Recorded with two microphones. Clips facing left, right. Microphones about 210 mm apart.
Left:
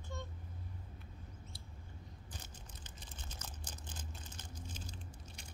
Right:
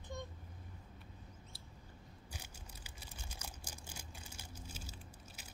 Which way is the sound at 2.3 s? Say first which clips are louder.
Right 1 dB; 10° right (ahead or behind).